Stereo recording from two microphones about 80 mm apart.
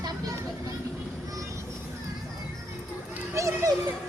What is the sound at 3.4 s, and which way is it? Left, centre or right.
Children playing, right.